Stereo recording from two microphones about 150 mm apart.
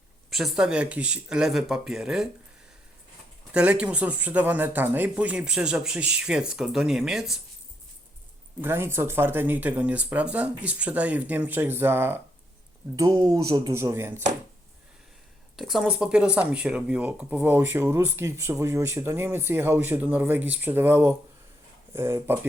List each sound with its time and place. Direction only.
0.3 s speech: centre (ahead or behind)
3.5 s speech: 10° right (ahead or behind)
8.6 s speech: 15° right (ahead or behind)
15.5 s speech: centre (ahead or behind)